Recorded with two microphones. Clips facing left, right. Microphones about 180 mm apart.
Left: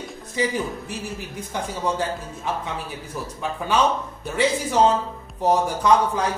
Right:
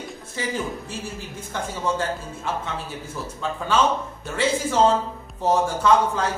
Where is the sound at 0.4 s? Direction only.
15° left (ahead or behind).